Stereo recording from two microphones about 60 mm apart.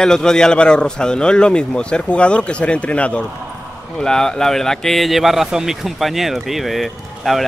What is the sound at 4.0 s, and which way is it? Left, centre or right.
Speech, centre.